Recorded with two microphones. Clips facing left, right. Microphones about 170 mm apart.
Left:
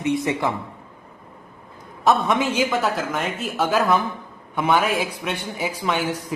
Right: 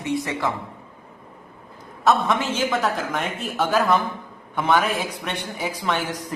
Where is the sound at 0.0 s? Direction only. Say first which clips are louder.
Left 3 dB; 20° left (ahead or behind).